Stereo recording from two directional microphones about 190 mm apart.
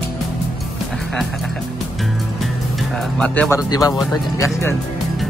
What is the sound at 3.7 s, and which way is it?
Speech, 20° left (ahead or behind).